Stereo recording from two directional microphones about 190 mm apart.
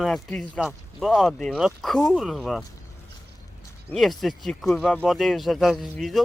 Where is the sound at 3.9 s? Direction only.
Centre (ahead or behind).